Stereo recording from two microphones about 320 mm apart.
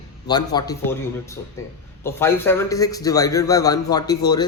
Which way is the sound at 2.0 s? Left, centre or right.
Centre.